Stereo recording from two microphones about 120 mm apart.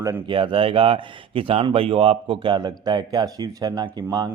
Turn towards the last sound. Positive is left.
turn(degrees=-35)  # may be behind; listen again after turning